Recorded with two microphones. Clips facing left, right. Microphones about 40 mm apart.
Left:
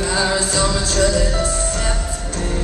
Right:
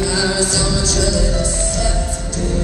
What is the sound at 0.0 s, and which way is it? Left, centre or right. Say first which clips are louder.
Music: right 1 dB; left.